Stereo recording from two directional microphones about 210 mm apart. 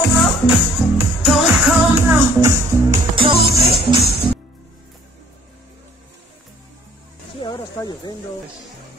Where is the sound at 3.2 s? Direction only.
25° right (ahead or behind).